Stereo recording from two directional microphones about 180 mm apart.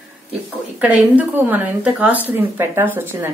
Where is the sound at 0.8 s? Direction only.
10° right (ahead or behind).